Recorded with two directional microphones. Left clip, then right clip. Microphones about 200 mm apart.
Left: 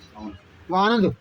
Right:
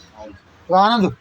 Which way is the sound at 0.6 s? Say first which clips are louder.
Right 6 dB; 15° right (ahead or behind).